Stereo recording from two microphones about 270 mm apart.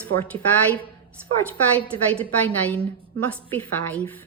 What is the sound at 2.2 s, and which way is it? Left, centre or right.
A woman's voice, centre.